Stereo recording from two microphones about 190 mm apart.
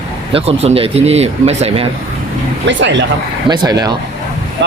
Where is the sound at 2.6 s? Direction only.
70° right (ahead or behind).